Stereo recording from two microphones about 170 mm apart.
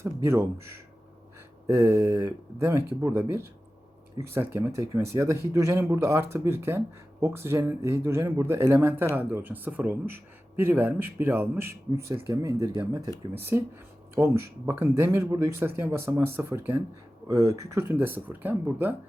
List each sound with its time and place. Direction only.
0.0 s a man's voice: 15° right (ahead or behind)